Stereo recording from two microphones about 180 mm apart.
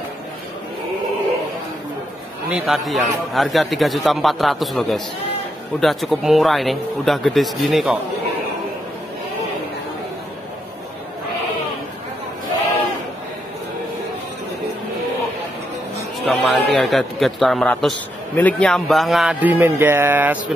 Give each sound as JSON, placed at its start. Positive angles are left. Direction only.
{"t": 2.5, "sound": "a man's voice", "side_deg": -5}
{"t": 16.3, "sound": "a man's voice", "side_deg": 0}